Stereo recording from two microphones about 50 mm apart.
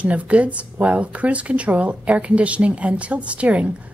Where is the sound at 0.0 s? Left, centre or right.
Right.